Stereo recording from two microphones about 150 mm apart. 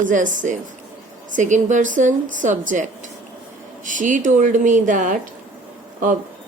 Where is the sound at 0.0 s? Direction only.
60° right (ahead or behind).